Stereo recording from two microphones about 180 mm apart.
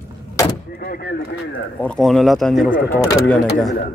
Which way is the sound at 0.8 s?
55° left (ahead or behind).